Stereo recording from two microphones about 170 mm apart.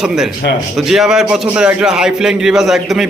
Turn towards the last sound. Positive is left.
turn(degrees=0)  # may be behind; listen again after turning